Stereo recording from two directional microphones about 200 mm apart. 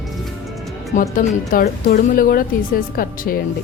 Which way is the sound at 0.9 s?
45° left (ahead or behind).